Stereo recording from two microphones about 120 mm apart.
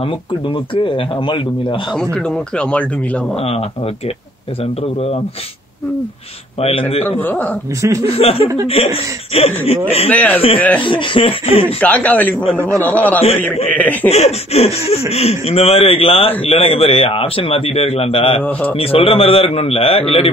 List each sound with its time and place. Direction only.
0.0 s speech: 45° left (ahead or behind)
2.1 s speech: 10° left (ahead or behind)
3.3 s speech: 55° left (ahead or behind)
6.6 s speech: 55° left (ahead or behind)
7.1 s speech: 15° left (ahead or behind)
7.8 s speech: 25° right (ahead or behind)
8.2 s speech: 55° left (ahead or behind)
10.0 s speech: 10° left (ahead or behind)
10.8 s speech: 45° left (ahead or behind)
11.8 s speech: 10° left (ahead or behind)
14.0 s speech: 65° left (ahead or behind)
18.4 s speech: 15° left (ahead or behind)
18.8 s speech: 50° left (ahead or behind)